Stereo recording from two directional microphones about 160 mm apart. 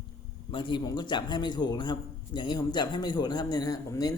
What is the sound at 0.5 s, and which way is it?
A man's voice, 30° left (ahead or behind).